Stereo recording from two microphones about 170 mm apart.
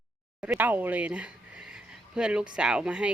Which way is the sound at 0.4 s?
10° right (ahead or behind).